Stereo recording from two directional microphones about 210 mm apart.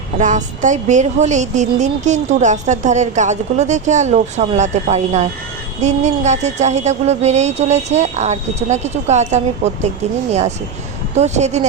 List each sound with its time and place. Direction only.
0.2 s speech: 35° right (ahead or behind)
11.1 s speech: 30° right (ahead or behind)